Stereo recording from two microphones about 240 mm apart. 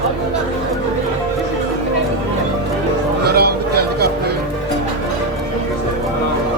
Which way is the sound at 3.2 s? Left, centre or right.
Right.